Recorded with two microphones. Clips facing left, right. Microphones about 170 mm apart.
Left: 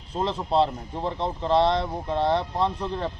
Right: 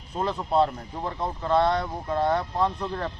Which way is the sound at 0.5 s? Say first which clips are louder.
Even; 25° left (ahead or behind).